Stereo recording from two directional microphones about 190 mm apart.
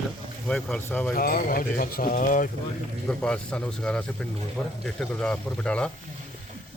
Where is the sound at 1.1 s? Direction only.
50° left (ahead or behind).